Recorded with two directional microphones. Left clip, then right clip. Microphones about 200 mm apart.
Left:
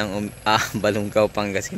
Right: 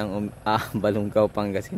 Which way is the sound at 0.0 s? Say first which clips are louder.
Left 4 dB; 5° right (ahead or behind).